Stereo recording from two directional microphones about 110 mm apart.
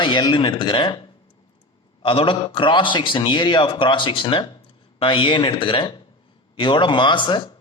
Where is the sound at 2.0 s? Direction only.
55° left (ahead or behind).